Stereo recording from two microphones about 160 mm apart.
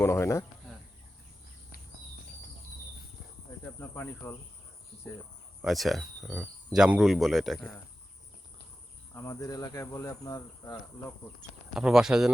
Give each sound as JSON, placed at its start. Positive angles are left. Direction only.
{"t": 0.0, "sound": "speech", "side_deg": 15}
{"t": 3.8, "sound": "speech", "side_deg": 15}
{"t": 5.6, "sound": "speech", "side_deg": 0}
{"t": 9.1, "sound": "speech", "side_deg": 20}
{"t": 11.7, "sound": "speech", "side_deg": -5}